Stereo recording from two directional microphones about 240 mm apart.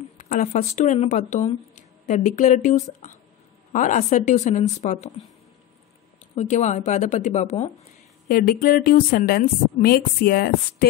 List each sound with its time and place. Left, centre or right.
0.2 s speech: left
6.3 s speech: left
8.3 s speech: left